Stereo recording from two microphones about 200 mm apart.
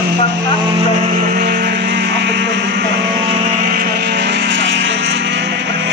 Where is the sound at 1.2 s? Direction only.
50° right (ahead or behind).